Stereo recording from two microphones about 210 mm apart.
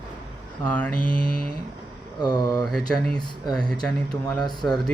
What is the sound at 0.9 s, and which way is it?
Mantra, 40° left (ahead or behind).